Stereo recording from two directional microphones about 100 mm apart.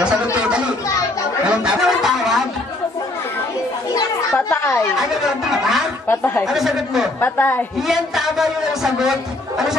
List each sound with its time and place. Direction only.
1.5 s fowl: 10° right (ahead or behind)
4.5 s a sound: 25° left (ahead or behind)
4.9 s speech: 5° right (ahead or behind)
6.0 s a woman's voice: 25° left (ahead or behind)
6.4 s speech: 5° right (ahead or behind)
7.2 s a woman's voice: 20° left (ahead or behind)
7.9 s speech: 5° right (ahead or behind)